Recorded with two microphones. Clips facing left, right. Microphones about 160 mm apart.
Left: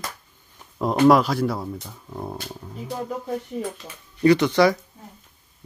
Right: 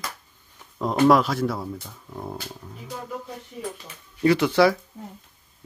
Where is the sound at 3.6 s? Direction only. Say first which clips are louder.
Left 3 dB; 45° left (ahead or behind).